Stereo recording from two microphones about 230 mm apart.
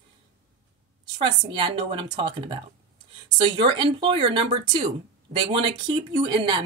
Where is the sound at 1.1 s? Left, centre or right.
Right.